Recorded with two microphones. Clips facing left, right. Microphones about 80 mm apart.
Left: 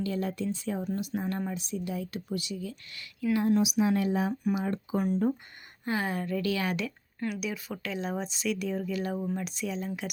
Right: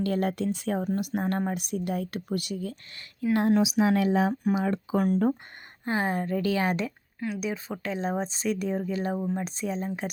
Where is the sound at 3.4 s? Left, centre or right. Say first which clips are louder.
Right 3 dB; right.